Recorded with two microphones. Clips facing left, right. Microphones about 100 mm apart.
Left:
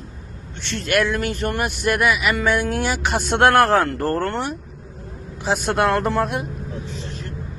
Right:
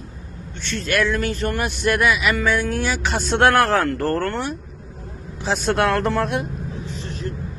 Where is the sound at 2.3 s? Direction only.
25° left (ahead or behind).